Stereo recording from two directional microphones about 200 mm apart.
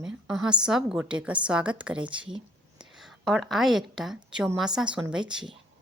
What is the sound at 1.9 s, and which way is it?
Speech, 25° right (ahead or behind).